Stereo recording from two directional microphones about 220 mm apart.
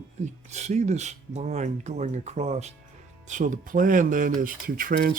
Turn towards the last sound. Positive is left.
turn(degrees=-40)  # may be behind; listen again after turning